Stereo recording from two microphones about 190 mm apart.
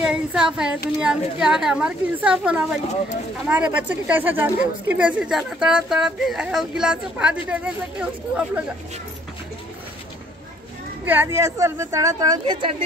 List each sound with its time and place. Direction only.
0.0 s speech: 5° right (ahead or behind)
11.1 s speech: 10° right (ahead or behind)